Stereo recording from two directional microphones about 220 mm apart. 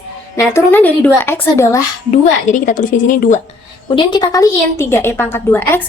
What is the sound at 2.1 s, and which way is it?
A woman's voice, 35° left (ahead or behind).